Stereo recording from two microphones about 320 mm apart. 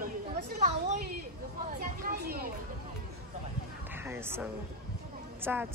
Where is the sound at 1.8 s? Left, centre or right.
Right.